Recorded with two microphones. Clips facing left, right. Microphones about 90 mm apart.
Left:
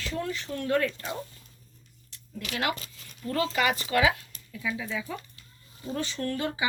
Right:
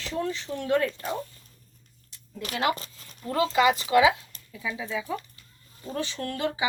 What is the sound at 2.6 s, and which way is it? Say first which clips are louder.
Speech: right 4 dB; 30° right (ahead or behind).